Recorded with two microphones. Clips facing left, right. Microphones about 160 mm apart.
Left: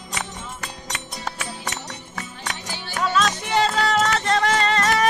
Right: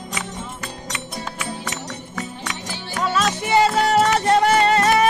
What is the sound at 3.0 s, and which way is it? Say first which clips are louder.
Music: right 1 dB; 5° right (ahead or behind).